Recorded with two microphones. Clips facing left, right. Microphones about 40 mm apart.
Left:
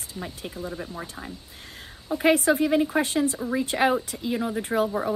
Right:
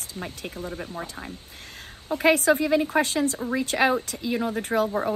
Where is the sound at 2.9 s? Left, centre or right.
Right.